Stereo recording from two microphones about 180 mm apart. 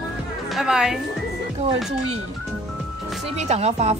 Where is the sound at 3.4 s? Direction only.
40° right (ahead or behind).